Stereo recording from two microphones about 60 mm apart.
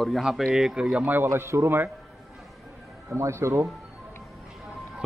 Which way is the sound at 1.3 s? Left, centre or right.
Right.